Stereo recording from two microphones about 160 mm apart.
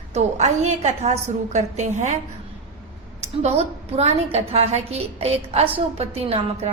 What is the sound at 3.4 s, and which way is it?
A woman's voice, 40° right (ahead or behind).